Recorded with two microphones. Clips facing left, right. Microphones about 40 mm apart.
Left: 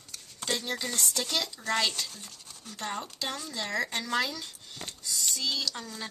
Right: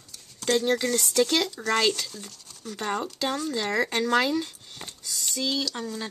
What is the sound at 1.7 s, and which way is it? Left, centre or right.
Speech, right.